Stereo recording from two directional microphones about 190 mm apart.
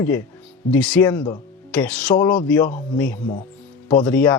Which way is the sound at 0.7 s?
10° left (ahead or behind).